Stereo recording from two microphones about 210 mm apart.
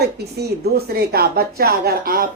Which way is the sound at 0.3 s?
50° right (ahead or behind).